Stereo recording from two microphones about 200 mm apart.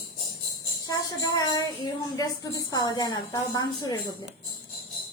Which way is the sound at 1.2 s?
20° left (ahead or behind).